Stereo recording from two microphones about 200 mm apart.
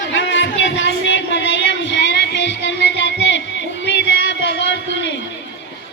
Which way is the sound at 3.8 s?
60° left (ahead or behind).